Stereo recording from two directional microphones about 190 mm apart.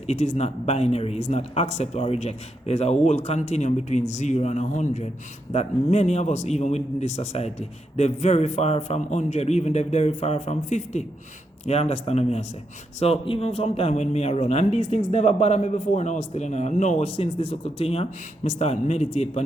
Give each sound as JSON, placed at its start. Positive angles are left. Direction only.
{"t": 0.1, "sound": "a man's voice", "side_deg": 35}